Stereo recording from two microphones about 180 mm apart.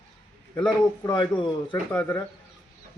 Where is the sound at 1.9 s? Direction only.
10° left (ahead or behind).